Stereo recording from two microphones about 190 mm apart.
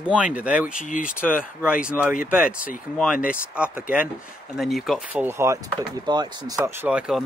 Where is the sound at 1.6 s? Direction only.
5° right (ahead or behind).